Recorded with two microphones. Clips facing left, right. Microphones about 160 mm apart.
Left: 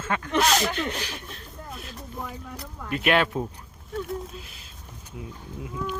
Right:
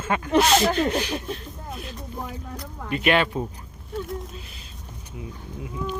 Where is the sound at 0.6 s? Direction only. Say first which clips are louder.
Right 7 dB; 40° right (ahead or behind).